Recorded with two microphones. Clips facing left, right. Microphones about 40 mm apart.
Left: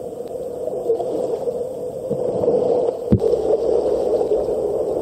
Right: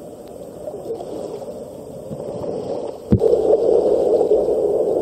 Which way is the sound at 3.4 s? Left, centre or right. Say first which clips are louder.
Right 3 dB; right.